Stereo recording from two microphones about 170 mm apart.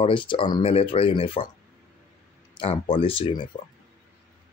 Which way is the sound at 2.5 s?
30° left (ahead or behind).